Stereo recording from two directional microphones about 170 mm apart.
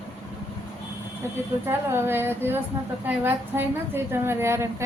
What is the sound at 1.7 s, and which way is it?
A woman's voice, 15° right (ahead or behind).